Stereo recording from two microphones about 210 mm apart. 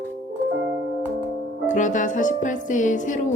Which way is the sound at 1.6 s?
35° left (ahead or behind).